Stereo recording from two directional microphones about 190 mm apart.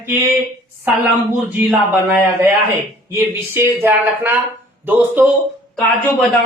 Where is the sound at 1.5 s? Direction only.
10° right (ahead or behind).